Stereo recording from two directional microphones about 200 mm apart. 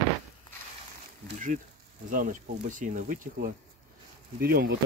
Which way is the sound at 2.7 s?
40° right (ahead or behind).